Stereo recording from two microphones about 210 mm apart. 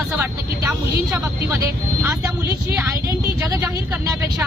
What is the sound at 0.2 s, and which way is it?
Speech, 15° right (ahead or behind).